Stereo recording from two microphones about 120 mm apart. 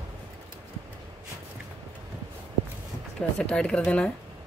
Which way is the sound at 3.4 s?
5° left (ahead or behind).